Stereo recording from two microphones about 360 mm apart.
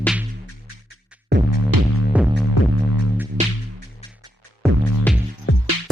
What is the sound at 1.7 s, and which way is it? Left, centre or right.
Music, right.